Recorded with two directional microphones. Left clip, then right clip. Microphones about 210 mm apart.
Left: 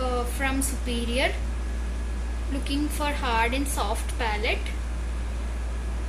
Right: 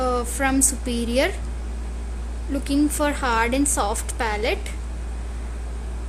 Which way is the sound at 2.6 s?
60° right (ahead or behind).